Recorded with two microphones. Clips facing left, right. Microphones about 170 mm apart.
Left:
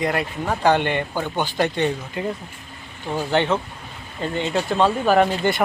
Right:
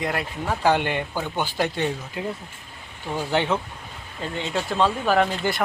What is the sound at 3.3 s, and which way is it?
Speech, 10° right (ahead or behind).